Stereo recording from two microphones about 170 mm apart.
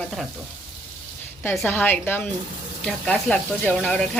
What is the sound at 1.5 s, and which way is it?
A woman's voice, 10° left (ahead or behind).